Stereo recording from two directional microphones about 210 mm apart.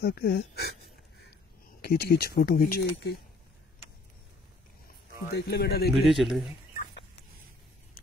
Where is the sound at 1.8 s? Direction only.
50° left (ahead or behind).